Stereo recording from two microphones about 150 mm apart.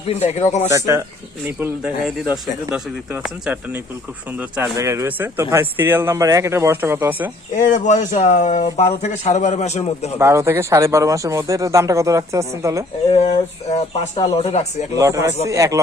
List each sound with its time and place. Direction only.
0.1 s a man's voice: 45° left (ahead or behind)
0.7 s speech: 20° right (ahead or behind)
7.5 s a man's voice: 55° left (ahead or behind)
10.2 s speech: 20° right (ahead or behind)
13.1 s a man's voice: 45° left (ahead or behind)
14.9 s speech: 20° right (ahead or behind)